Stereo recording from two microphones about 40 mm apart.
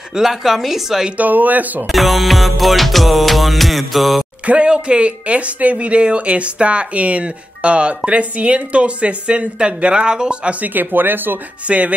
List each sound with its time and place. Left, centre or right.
0.1 s a woman's voice: centre
1.1 s speech: right
1.9 s music: centre
4.5 s speech: right
10.6 s speech: right
11.6 s speech: right